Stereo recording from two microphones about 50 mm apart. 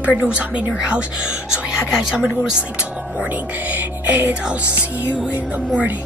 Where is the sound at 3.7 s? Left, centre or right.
Right.